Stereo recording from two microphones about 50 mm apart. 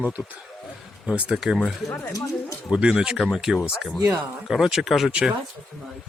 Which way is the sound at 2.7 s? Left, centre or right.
Right.